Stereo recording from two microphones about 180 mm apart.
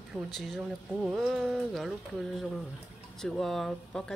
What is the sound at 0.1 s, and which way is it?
Speech, centre (ahead or behind).